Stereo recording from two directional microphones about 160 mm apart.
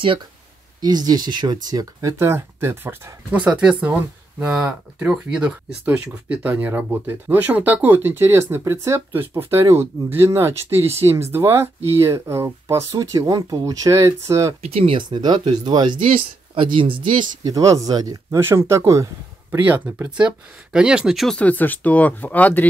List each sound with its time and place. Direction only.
0.7 s speech: 25° right (ahead or behind)
14.6 s speech: 40° right (ahead or behind); by 22.7 s 10° left (ahead or behind)